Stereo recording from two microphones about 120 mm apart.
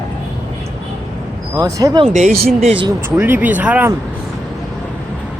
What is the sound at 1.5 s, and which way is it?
Speech, 30° right (ahead or behind).